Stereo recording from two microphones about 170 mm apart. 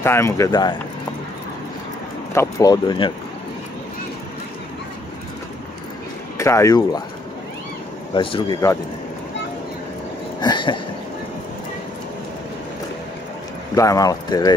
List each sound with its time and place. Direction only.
0.0 s speech: 15° left (ahead or behind)
2.3 s speech: 20° left (ahead or behind)
6.3 s speech: 15° left (ahead or behind)
8.1 s speech: 30° left (ahead or behind)
10.4 s a sound: 25° left (ahead or behind)
13.7 s speech: 20° left (ahead or behind)